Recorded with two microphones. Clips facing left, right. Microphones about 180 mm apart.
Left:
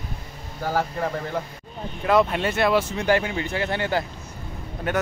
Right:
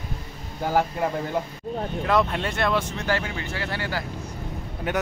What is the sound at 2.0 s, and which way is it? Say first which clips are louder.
Speech: left 4 dB; 5° left (ahead or behind).